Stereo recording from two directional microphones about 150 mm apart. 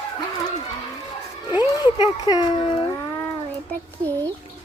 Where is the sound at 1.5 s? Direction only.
30° left (ahead or behind).